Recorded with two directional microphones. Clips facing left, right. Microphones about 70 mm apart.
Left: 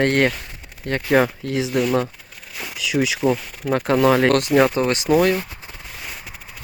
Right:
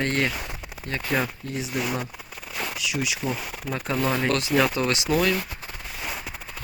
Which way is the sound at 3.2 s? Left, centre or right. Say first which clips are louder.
Left 9 dB; left.